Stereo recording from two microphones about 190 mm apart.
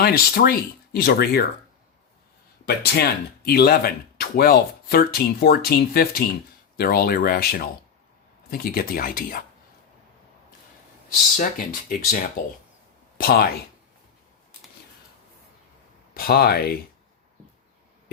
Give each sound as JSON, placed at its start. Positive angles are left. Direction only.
{"t": 0.0, "sound": "speech", "side_deg": 55}
{"t": 2.6, "sound": "speech", "side_deg": 55}
{"t": 11.3, "sound": "speech", "side_deg": 45}
{"t": 13.1, "sound": "speech", "side_deg": 50}
{"t": 16.1, "sound": "speech", "side_deg": 50}